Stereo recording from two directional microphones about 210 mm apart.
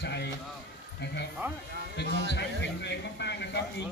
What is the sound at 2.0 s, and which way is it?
Speech, 55° right (ahead or behind).